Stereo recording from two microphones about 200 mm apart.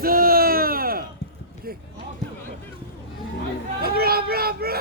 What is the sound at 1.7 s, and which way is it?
Basketball bounce, 50° right (ahead or behind).